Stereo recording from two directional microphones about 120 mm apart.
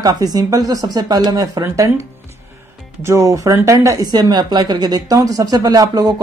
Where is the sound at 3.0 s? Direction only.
25° right (ahead or behind).